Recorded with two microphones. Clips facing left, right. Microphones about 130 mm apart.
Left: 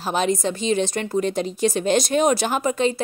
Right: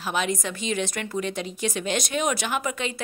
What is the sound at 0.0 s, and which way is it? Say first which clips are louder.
A woman's voice: left 5 dB; 35° left (ahead or behind).